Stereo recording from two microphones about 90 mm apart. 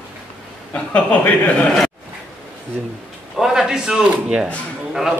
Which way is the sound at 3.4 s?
5° right (ahead or behind).